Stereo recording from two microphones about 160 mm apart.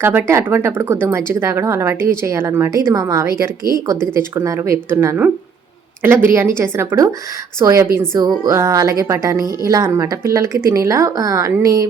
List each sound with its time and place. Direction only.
0.0 s speech: 15° right (ahead or behind)